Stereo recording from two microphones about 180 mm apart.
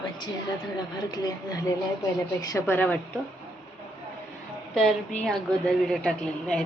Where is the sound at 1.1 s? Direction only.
20° left (ahead or behind).